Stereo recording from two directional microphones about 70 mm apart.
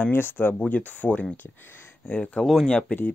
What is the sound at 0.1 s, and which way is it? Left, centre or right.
Speech, left.